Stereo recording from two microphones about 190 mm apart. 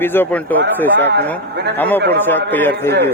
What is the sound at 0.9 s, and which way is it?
Speech, 65° right (ahead or behind).